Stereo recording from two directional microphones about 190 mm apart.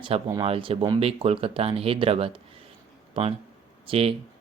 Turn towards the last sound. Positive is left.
turn(degrees=-30)  # may be behind; listen again after turning